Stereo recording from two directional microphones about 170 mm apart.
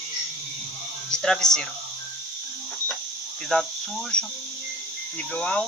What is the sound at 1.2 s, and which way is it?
Speech, 5° left (ahead or behind).